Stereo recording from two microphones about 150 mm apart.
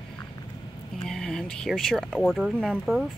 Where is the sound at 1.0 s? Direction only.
5° left (ahead or behind).